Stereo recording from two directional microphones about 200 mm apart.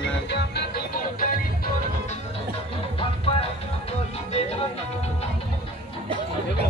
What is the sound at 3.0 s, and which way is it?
Music, 30° left (ahead or behind).